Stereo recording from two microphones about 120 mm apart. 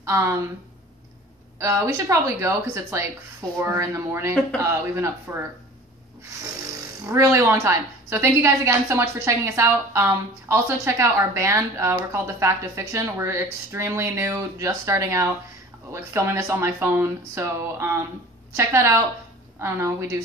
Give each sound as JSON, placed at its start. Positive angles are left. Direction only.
{"t": 0.0, "sound": "speech", "side_deg": -25}
{"t": 1.6, "sound": "a woman's voice", "side_deg": -25}
{"t": 7.1, "sound": "a woman's voice", "side_deg": -20}